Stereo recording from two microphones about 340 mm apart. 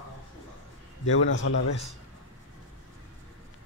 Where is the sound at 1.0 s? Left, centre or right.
Left.